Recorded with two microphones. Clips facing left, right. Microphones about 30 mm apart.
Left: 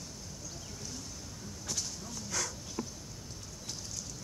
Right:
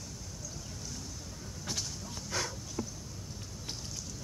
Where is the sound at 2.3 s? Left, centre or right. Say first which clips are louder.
Right 2 dB; right.